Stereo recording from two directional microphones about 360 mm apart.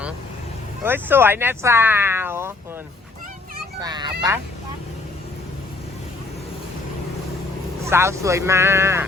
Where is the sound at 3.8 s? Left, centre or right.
Centre.